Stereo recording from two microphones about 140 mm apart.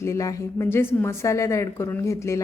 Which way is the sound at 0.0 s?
20° left (ahead or behind).